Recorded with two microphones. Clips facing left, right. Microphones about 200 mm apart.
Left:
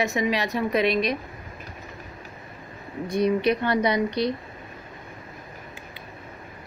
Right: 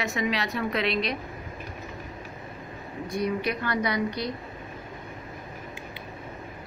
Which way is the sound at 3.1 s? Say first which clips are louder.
Left 6 dB; 25° left (ahead or behind).